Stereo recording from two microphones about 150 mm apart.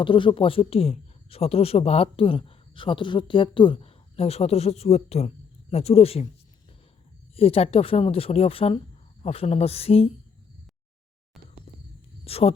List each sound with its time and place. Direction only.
0.0 s speech: 35° left (ahead or behind)
7.3 s speech: 40° left (ahead or behind)
12.2 s speech: 40° left (ahead or behind)